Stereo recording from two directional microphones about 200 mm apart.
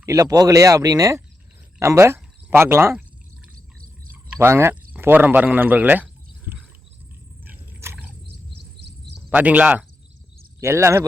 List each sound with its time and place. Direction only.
0.0 s speech: 15° right (ahead or behind)
4.1 s a sound: 10° right (ahead or behind)
9.3 s speech: 5° right (ahead or behind)